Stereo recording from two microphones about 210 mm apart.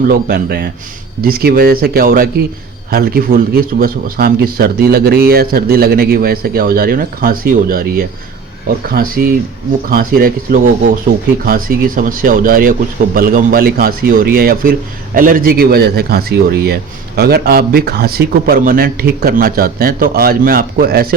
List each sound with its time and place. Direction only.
0.1 s a man's voice: 45° right (ahead or behind)